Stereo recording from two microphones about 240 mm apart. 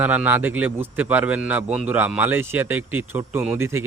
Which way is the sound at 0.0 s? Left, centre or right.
Centre.